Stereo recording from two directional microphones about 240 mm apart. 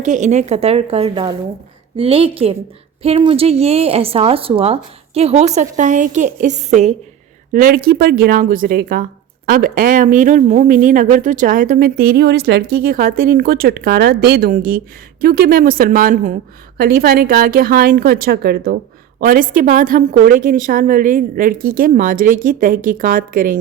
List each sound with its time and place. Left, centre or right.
0.0 s a woman's voice: right